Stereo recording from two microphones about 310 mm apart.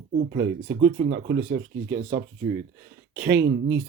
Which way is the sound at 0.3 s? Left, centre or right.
Right.